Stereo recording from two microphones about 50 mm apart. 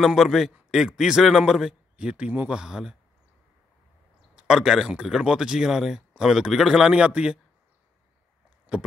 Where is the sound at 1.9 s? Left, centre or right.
Right.